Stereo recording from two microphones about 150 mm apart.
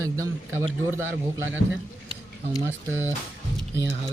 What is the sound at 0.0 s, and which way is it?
Speech, 20° right (ahead or behind).